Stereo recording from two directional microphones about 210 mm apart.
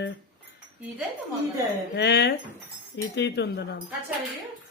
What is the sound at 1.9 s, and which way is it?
A man's voice, 55° left (ahead or behind).